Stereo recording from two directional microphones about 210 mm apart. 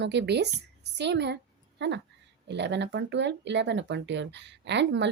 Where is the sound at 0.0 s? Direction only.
55° right (ahead or behind).